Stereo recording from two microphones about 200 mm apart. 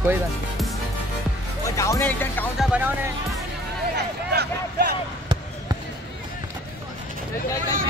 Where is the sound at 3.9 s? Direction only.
55° right (ahead or behind).